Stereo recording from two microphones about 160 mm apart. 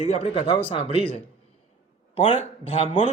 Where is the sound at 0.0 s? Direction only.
40° left (ahead or behind).